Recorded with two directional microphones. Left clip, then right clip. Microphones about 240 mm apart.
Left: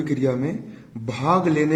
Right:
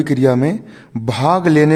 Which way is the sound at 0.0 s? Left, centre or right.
Right.